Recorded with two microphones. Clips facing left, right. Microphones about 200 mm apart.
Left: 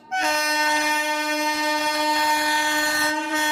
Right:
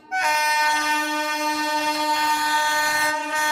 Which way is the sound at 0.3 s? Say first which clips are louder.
Even; 30° left (ahead or behind).